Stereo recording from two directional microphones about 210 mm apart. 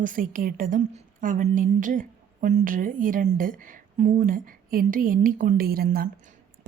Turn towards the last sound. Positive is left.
turn(degrees=-45)  # may be behind; listen again after turning